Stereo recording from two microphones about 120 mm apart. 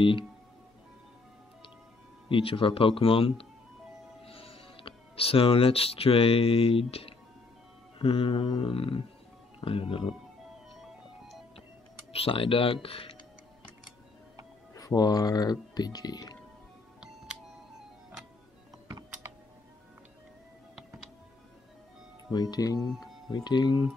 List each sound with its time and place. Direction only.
2.2 s speech: 45° left (ahead or behind)
12.1 s speech: 50° left (ahead or behind)
14.7 s speech: 30° left (ahead or behind)
22.3 s speech: 35° left (ahead or behind)